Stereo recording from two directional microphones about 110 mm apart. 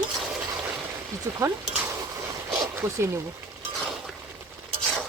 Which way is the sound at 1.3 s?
25° right (ahead or behind).